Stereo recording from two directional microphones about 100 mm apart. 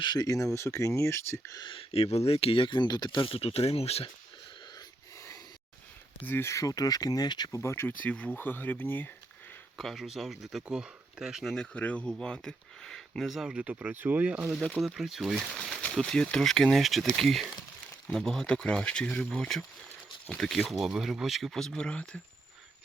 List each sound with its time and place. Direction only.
0.0 s speech: 45° left (ahead or behind); by 1.5 s 25° left (ahead or behind)
1.5 s speech: 50° left (ahead or behind)
1.9 s speech: 90° left
6.2 s speech: 25° left (ahead or behind); by 7.6 s 45° left (ahead or behind)
7.6 s speech: 25° left (ahead or behind)
9.7 s speech: centre (ahead or behind)
11.5 s speech: 10° left (ahead or behind)